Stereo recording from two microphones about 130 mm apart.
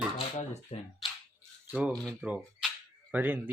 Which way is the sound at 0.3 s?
60° left (ahead or behind).